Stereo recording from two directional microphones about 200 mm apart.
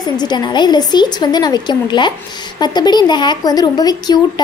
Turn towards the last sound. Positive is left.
turn(degrees=20)  # may be behind; listen again after turning